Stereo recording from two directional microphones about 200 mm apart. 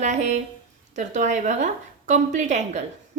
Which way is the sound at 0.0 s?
35° right (ahead or behind).